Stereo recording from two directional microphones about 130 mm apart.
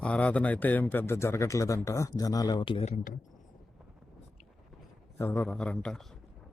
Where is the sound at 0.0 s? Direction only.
10° left (ahead or behind); by 2.8 s 40° left (ahead or behind).